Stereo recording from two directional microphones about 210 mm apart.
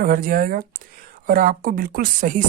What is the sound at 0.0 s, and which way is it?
Speech, 40° right (ahead or behind).